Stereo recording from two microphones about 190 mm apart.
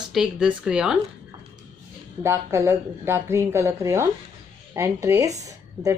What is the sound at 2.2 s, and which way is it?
A woman's voice, 15° right (ahead or behind).